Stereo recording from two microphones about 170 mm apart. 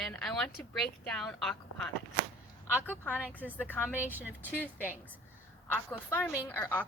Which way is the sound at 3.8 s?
10° right (ahead or behind).